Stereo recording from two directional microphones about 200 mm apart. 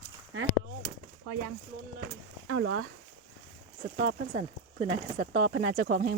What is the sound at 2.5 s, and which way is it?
Speech, 70° right (ahead or behind).